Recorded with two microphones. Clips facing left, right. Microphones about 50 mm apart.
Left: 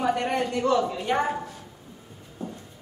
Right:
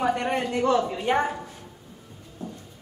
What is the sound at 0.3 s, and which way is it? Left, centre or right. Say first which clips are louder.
Speech: right 1 dB; right.